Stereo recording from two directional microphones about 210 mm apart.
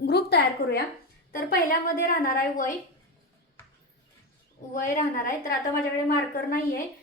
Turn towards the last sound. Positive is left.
turn(degrees=45)  # may be behind; listen again after turning